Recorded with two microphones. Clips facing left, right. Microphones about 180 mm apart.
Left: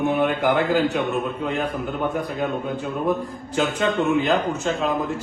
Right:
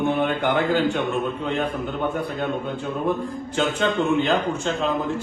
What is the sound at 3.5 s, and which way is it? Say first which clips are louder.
A man's voice: left 1 dB; 5° left (ahead or behind).